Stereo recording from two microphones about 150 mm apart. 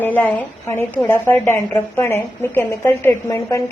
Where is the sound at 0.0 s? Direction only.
10° left (ahead or behind).